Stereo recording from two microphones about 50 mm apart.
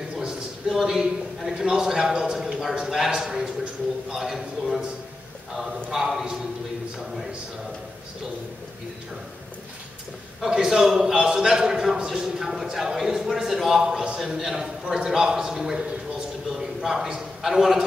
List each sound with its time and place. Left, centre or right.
0.1 s a man's voice: centre
3.3 s a man's voice: centre
4.1 s a man's voice: centre
5.9 s a man's voice: centre
10.4 s a man's voice: centre
16.4 s a sound: centre